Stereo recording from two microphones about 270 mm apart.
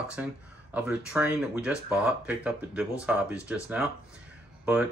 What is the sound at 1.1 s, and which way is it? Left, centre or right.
Speech, centre.